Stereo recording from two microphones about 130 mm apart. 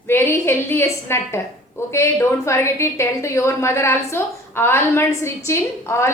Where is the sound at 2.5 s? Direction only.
20° left (ahead or behind).